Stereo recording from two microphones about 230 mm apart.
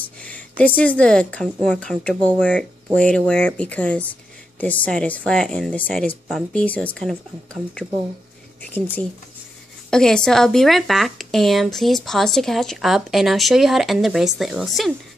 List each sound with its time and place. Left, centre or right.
0.0 s speech: centre
9.8 s speech: centre